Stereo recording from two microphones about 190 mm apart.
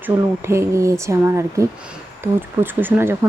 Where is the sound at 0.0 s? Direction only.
15° right (ahead or behind).